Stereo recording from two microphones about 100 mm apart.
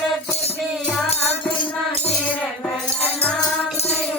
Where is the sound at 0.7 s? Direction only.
5° left (ahead or behind).